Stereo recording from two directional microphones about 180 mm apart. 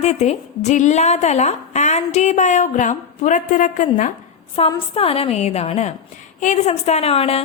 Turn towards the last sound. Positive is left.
turn(degrees=35)  # may be behind; listen again after turning